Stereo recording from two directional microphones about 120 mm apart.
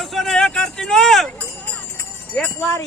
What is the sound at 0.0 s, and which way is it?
Vehicle, centre (ahead or behind).